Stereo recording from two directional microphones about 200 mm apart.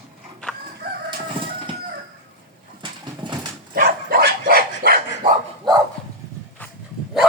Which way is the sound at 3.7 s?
50° right (ahead or behind).